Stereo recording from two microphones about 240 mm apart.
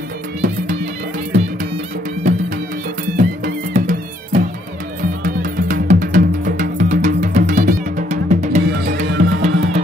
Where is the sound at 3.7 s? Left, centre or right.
Right.